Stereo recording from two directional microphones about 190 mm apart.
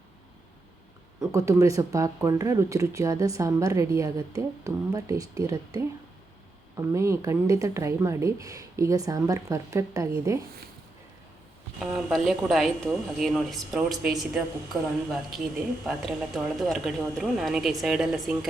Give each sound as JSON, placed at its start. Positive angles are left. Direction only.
{"t": 1.2, "sound": "a woman's voice", "side_deg": -15}
{"t": 11.8, "sound": "speech", "side_deg": -5}